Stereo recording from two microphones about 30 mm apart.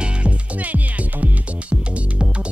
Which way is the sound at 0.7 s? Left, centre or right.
Right.